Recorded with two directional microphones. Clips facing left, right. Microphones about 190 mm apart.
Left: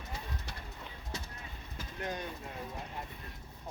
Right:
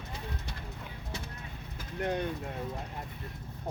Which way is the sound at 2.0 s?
60° right (ahead or behind).